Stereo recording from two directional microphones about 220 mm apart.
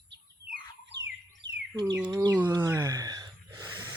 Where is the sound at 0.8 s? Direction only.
55° right (ahead or behind).